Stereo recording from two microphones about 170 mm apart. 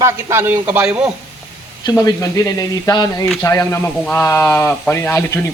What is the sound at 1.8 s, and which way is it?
Speech, 20° left (ahead or behind).